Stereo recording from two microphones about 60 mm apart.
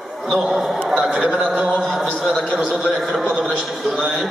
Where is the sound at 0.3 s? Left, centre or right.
Centre.